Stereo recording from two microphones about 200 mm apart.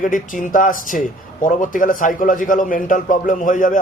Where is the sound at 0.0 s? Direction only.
40° left (ahead or behind).